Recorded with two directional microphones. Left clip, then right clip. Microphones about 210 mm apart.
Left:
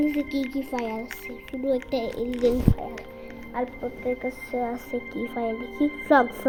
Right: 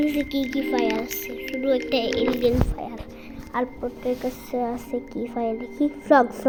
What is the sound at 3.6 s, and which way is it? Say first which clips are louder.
A woman's voice: right 3 dB; 15° right (ahead or behind).